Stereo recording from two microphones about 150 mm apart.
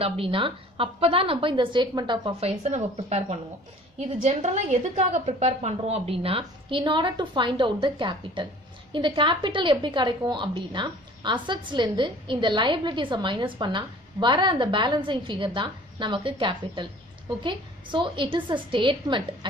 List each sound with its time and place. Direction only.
0.0 s a woman's voice: 35° right (ahead or behind)